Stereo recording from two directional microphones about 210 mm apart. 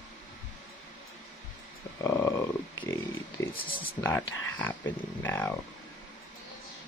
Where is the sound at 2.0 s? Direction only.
15° left (ahead or behind).